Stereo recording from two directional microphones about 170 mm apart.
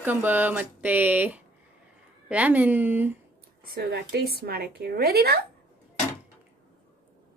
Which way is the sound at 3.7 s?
75° right (ahead or behind).